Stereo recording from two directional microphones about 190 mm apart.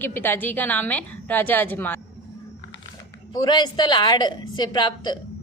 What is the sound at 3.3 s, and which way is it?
A woman's voice, 20° left (ahead or behind).